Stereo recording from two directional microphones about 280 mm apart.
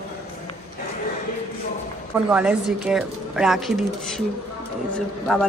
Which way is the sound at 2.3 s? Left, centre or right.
Centre.